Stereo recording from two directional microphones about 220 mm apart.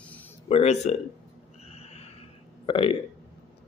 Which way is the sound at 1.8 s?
30° left (ahead or behind).